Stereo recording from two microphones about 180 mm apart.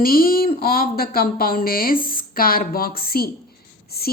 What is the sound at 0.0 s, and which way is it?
A woman's voice, 55° left (ahead or behind).